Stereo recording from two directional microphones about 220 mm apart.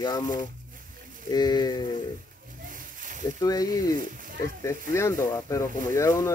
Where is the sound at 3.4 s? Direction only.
15° left (ahead or behind).